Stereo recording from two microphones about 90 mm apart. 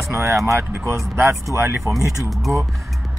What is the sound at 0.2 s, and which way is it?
Speech, 35° right (ahead or behind).